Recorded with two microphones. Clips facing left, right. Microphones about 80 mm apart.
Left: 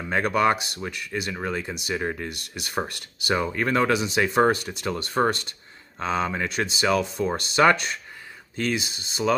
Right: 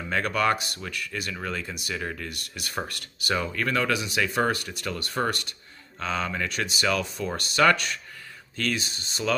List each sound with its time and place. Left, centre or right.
0.1 s speech: left